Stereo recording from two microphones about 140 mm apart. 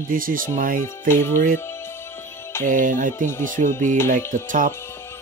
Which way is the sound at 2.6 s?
75° right (ahead or behind).